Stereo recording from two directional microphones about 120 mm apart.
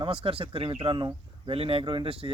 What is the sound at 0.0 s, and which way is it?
Speech, 50° right (ahead or behind).